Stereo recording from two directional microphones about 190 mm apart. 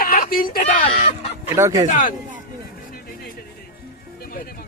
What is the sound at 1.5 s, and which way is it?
Speech, 15° right (ahead or behind).